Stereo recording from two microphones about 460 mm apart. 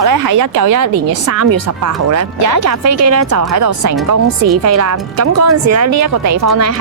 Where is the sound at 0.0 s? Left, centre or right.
Right.